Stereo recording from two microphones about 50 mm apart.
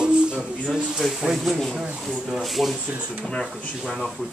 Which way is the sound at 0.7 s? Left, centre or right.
Centre.